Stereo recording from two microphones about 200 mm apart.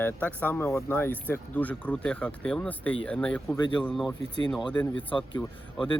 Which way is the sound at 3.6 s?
20° left (ahead or behind).